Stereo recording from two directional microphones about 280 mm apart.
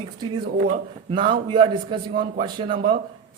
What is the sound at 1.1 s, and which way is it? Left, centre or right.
A man's voice, centre.